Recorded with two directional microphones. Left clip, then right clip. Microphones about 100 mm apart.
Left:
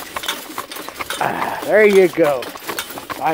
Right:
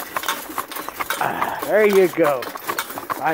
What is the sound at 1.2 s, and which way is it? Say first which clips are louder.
Mechanisms: left 3 dB; 40° left (ahead or behind).